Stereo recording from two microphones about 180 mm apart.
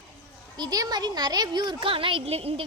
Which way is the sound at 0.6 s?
20° right (ahead or behind).